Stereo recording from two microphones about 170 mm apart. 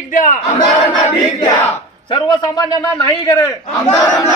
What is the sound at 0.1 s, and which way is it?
Battle cry, 50° left (ahead or behind).